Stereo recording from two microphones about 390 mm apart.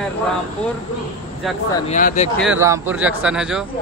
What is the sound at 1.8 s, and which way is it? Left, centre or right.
Speech, centre.